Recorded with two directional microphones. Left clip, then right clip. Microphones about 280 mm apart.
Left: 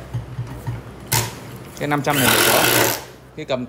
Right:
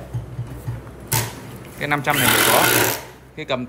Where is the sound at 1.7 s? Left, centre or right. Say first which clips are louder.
Even; centre.